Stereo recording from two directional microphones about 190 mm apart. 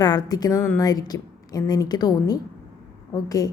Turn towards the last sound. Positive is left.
turn(degrees=20)  # may be behind; listen again after turning